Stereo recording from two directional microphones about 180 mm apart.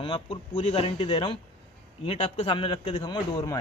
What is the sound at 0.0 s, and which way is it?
Speech, 30° left (ahead or behind).